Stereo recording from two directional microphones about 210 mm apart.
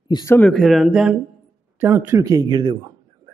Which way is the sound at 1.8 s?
10° right (ahead or behind).